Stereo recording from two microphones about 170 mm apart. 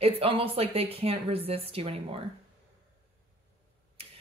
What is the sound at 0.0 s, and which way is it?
Speech, 35° right (ahead or behind).